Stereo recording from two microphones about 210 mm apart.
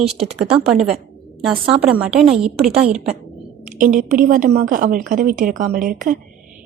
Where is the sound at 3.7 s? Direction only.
40° right (ahead or behind).